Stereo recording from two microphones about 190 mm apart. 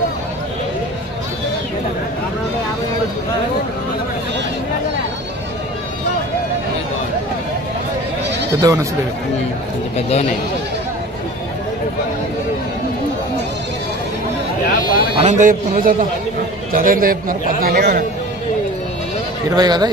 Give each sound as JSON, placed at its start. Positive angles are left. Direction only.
{"t": 8.5, "sound": "speech", "side_deg": -20}
{"t": 14.7, "sound": "a sound", "side_deg": 45}
{"t": 15.1, "sound": "a man's voice", "side_deg": -40}
{"t": 19.5, "sound": "speech", "side_deg": -20}